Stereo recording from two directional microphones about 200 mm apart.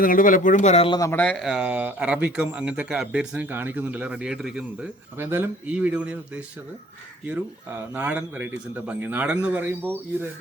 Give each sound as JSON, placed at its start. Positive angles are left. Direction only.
{"t": 0.0, "sound": "speech", "side_deg": 45}
{"t": 0.9, "sound": "speech", "side_deg": 10}
{"t": 7.9, "sound": "a man's voice", "side_deg": -10}